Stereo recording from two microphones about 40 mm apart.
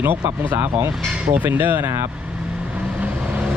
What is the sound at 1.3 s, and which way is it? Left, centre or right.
Speech, right.